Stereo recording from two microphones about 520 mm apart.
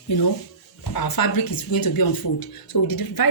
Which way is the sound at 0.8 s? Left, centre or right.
Left.